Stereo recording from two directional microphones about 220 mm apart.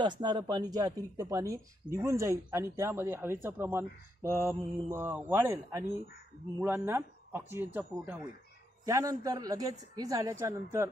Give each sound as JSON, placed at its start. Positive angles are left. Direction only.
{"t": 0.0, "sound": "speech", "side_deg": -20}